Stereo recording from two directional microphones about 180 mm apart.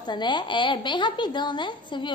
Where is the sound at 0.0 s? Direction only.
25° left (ahead or behind).